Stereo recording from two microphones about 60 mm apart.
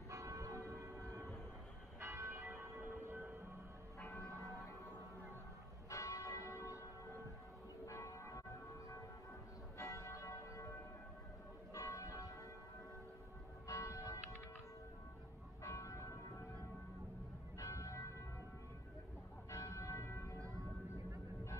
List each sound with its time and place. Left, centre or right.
0.1 s church bell: right
2.0 s church bell: right
2.8 s a sound: right
4.3 s a sound: right
5.9 s church bell: left
7.8 s church bell: left
9.8 s church bell: left
13.7 s church bell: left
15.6 s church bell: left
17.6 s church bell: left
19.5 s church bell: left
20.3 s music: right